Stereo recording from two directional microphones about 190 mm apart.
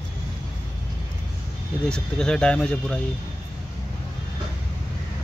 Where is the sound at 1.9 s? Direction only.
5° left (ahead or behind).